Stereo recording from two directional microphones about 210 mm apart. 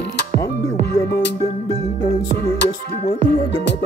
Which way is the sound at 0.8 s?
50° left (ahead or behind).